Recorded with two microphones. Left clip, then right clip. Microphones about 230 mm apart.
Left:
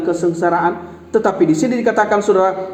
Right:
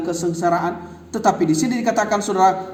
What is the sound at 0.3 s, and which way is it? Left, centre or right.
A man's voice, right.